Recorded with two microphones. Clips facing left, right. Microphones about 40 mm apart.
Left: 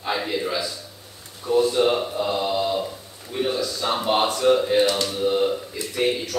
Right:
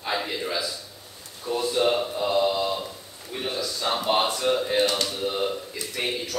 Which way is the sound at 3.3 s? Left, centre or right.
Centre.